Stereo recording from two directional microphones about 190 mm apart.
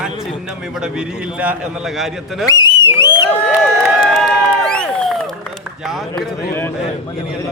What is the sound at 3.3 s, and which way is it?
Crowd, 5° left (ahead or behind).